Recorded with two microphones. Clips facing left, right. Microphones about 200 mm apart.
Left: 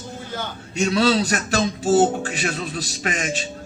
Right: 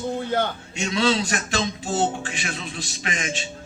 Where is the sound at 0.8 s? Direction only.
40° left (ahead or behind).